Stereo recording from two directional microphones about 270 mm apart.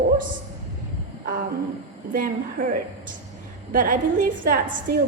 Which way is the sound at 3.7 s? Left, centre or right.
Right.